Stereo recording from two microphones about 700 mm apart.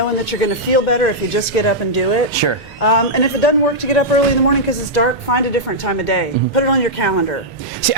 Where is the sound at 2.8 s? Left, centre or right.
Left.